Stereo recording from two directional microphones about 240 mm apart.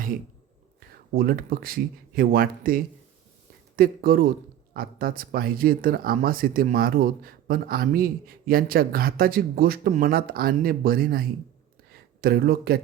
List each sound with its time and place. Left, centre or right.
1.1 s a man's voice: right